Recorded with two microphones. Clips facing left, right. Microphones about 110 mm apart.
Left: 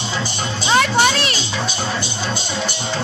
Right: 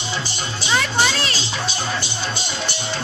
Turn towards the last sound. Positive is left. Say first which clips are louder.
# left 5 dB
turn(degrees=55)  # may be behind; listen again after turning